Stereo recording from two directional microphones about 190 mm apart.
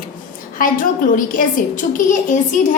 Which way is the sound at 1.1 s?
45° left (ahead or behind).